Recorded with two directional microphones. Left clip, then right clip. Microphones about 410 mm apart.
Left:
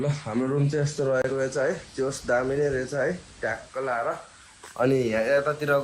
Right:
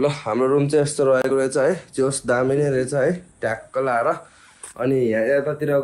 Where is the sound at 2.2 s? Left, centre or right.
Right.